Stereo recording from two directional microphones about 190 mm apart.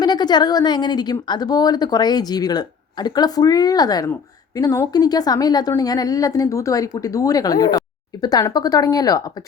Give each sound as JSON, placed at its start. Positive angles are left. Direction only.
{"t": 0.0, "sound": "a woman's voice", "side_deg": 20}